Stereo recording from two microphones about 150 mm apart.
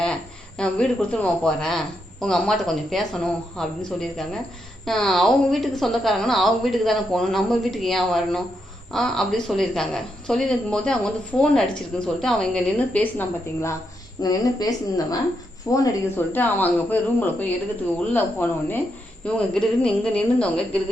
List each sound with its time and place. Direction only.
0.0 s a woman's voice: 5° left (ahead or behind)